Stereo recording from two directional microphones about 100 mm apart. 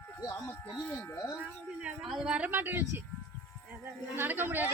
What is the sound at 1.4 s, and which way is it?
Speech, 10° right (ahead or behind).